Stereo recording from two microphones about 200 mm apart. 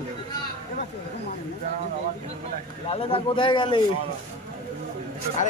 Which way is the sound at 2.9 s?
25° left (ahead or behind).